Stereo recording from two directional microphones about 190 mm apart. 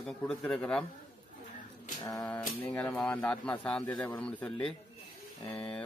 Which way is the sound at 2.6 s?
5° left (ahead or behind).